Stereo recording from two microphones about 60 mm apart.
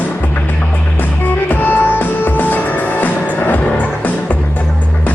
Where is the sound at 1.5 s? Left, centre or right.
Left.